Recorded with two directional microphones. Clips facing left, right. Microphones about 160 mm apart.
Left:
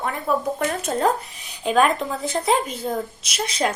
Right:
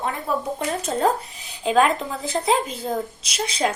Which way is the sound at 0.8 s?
30° right (ahead or behind).